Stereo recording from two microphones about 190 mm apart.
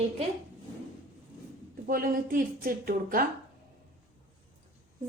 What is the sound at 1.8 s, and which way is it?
A woman's voice, 50° right (ahead or behind).